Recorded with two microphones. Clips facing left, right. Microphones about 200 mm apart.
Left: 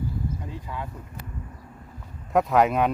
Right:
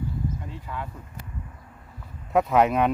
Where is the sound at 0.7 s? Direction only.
15° left (ahead or behind).